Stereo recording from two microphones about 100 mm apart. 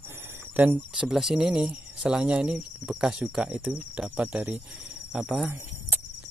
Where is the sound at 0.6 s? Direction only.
15° right (ahead or behind).